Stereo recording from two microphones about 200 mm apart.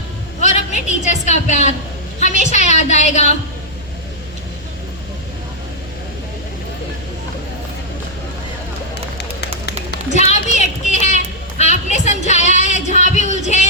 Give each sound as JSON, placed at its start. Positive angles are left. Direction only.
{"t": 0.4, "sound": "a woman's voice", "side_deg": 35}
{"t": 10.2, "sound": "a sound", "side_deg": 35}
{"t": 11.0, "sound": "child singing", "side_deg": 35}